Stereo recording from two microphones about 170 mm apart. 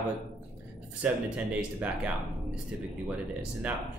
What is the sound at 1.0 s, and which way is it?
Speech, 10° right (ahead or behind).